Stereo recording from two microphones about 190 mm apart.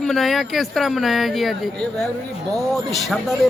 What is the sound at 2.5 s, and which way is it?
Speech, centre (ahead or behind).